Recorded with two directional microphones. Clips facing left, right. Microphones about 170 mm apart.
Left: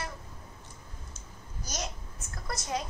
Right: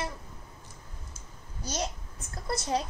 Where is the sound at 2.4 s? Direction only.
30° right (ahead or behind).